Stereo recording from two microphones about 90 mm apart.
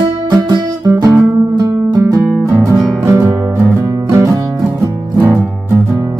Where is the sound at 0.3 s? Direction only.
50° right (ahead or behind); by 3.3 s 25° right (ahead or behind).